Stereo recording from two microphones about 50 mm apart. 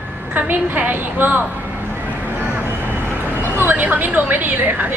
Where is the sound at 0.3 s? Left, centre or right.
Right.